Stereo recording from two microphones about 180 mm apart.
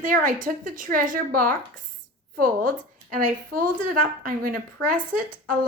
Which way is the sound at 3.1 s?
50° right (ahead or behind).